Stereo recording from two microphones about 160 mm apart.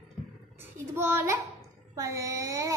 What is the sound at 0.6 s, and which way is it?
Child singing, 15° right (ahead or behind).